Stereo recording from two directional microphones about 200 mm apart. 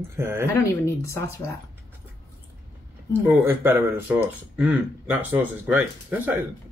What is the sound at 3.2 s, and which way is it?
Speech, 10° right (ahead or behind).